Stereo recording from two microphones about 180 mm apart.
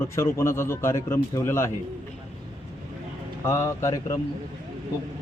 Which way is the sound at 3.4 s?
15° left (ahead or behind).